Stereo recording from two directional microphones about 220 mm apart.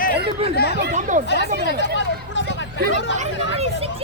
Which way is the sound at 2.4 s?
55° left (ahead or behind).